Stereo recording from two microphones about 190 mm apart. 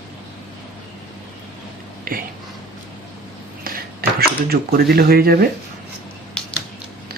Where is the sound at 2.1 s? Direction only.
50° right (ahead or behind).